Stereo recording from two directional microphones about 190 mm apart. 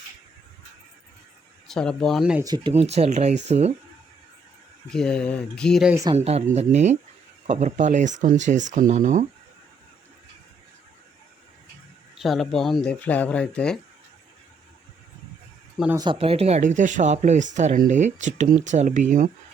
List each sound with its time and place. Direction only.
1.6 s speech: 5° left (ahead or behind)
2.4 s speech: 20° right (ahead or behind)
2.7 s speech: 35° right (ahead or behind)
4.9 s speech: 5° left (ahead or behind)
5.9 s speech: 15° right (ahead or behind)
6.1 s speech: 35° right (ahead or behind)
12.1 s speech: centre (ahead or behind)
16.0 s speech: 25° right (ahead or behind); by 19.3 s 45° right (ahead or behind)